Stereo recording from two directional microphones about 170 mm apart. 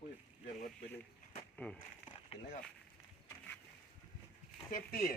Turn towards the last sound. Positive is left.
turn(degrees=60)  # may be behind; listen again after turning